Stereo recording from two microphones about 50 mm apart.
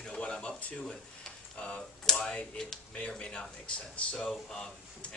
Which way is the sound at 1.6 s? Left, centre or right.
Centre.